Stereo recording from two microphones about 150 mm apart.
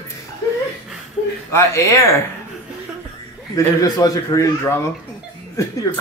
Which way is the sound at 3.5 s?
25° left (ahead or behind).